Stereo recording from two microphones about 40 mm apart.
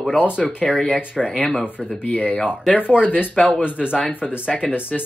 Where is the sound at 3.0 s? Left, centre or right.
Left.